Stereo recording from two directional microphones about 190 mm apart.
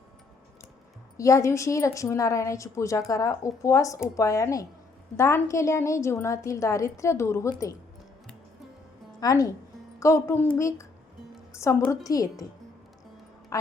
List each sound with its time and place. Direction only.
1.1 s a woman's voice: 15° left (ahead or behind)
9.2 s a woman's voice: 20° left (ahead or behind)
13.5 s a sound: 20° left (ahead or behind)